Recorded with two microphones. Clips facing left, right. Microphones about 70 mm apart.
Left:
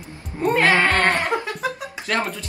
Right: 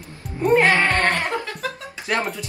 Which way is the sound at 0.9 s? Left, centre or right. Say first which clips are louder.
Left 1 dB; left.